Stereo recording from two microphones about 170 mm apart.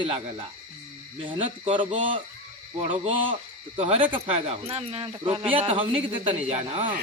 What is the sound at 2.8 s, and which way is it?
Speech, 45° right (ahead or behind).